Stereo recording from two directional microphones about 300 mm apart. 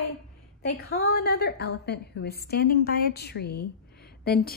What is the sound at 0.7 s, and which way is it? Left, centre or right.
A woman's voice, left.